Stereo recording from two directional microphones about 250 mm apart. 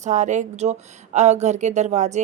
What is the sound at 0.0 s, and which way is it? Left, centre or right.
Speech, right.